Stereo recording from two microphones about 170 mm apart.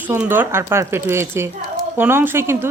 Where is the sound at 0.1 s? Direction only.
10° right (ahead or behind).